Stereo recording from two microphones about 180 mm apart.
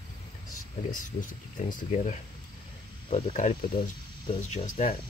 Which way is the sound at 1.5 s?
45° left (ahead or behind).